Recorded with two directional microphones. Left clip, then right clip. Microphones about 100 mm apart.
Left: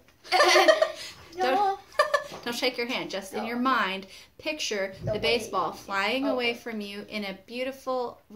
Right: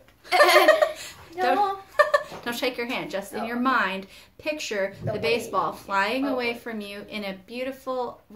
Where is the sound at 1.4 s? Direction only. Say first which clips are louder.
Right 2 dB; 20° left (ahead or behind).